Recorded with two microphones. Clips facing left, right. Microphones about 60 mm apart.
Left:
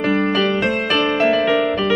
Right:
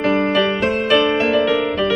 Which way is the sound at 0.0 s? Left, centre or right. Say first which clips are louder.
Right 1 dB; centre.